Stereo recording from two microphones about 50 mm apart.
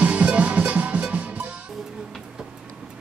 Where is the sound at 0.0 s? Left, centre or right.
Right.